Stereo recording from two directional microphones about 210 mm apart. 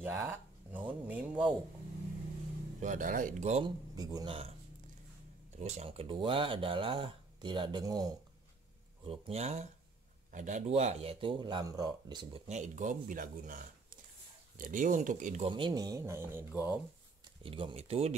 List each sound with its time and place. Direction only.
0.0 s speech: 10° right (ahead or behind)
2.8 s speech: 40° right (ahead or behind)
3.9 s speech: 20° right (ahead or behind)
5.6 s speech: 30° right (ahead or behind)
12.4 s speech: 35° right (ahead or behind)
14.6 s speech: 40° right (ahead or behind); by 16.8 s 10° right (ahead or behind)
17.4 s speech: 25° right (ahead or behind)